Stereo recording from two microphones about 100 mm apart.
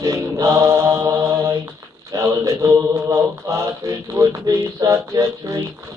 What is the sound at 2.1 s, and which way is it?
Mantra, 30° right (ahead or behind).